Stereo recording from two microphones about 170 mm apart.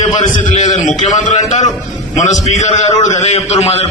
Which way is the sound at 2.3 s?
45° left (ahead or behind).